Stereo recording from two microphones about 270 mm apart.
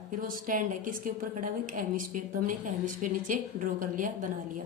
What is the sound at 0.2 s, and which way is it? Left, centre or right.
A woman's voice, right.